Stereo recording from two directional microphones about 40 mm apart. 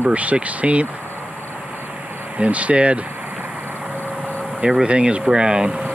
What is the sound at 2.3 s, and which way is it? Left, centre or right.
Speech, right.